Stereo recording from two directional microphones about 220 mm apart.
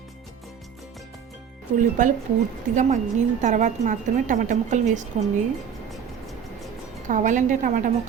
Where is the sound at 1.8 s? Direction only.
35° right (ahead or behind).